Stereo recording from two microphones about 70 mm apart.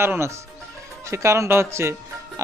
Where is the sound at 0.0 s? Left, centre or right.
Right.